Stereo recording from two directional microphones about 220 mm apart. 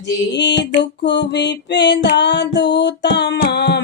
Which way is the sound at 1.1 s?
50° left (ahead or behind).